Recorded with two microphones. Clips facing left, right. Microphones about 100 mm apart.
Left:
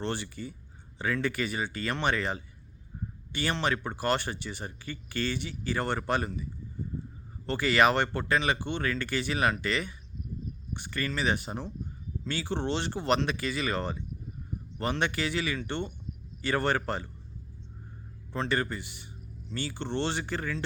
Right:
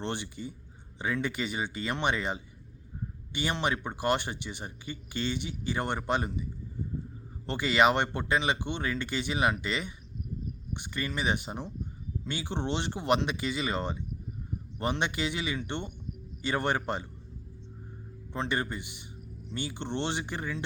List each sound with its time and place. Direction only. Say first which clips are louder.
0.0 s speech: left 1 dB; 20° right (ahead or behind)
7.4 s speech: even; 20° right (ahead or behind)
18.3 s speech: left 2 dB; 20° right (ahead or behind)